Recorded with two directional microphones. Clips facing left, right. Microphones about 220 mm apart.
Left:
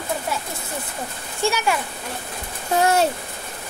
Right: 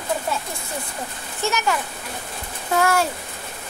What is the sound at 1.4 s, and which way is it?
Speech, 10° left (ahead or behind).